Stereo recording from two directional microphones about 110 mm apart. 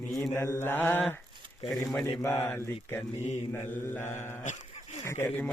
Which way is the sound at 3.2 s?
75° left (ahead or behind).